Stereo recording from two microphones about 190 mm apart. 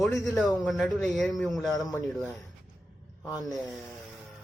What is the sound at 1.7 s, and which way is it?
Speech, 20° left (ahead or behind).